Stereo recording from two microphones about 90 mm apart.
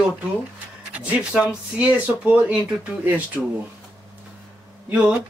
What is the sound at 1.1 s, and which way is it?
Speech, 15° right (ahead or behind).